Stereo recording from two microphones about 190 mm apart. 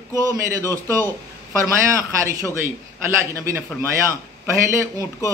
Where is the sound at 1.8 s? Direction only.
15° right (ahead or behind).